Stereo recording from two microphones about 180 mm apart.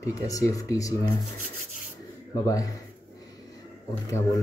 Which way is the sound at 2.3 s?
20° left (ahead or behind).